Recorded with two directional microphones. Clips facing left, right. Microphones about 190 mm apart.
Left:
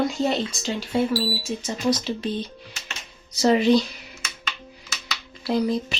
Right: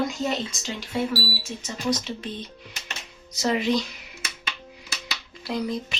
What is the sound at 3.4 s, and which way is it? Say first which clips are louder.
Speech: left 6 dB; 35° left (ahead or behind).